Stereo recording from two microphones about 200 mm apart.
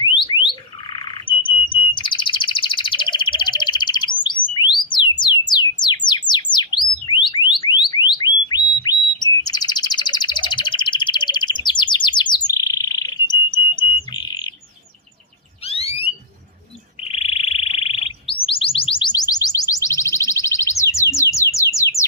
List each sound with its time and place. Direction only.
0.0 s alarm: 25° left (ahead or behind)
0.9 s chirp: 25° left (ahead or behind)
4.5 s a sound: 20° left (ahead or behind)
5.2 s bird: 20° left (ahead or behind)
7.1 s alarm: 25° left (ahead or behind)
15.6 s alarm: 30° left (ahead or behind)
17.0 s bird: 30° left (ahead or behind)
20.9 s a sound: 15° left (ahead or behind)